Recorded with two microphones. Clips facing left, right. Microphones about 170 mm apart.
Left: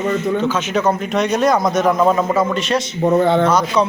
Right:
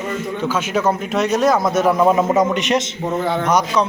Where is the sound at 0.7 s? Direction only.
5° right (ahead or behind).